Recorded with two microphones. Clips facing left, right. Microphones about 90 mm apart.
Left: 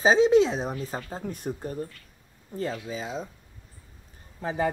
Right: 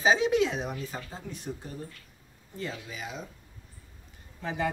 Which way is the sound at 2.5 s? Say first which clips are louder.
Left 6 dB; 35° left (ahead or behind).